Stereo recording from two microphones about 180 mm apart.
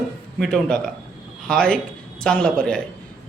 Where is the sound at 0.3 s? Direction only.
Centre (ahead or behind).